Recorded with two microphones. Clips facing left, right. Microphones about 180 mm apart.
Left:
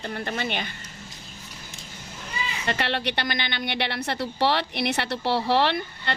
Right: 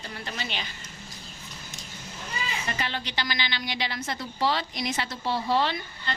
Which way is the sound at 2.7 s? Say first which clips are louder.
Left 11 dB; 70° left (ahead or behind).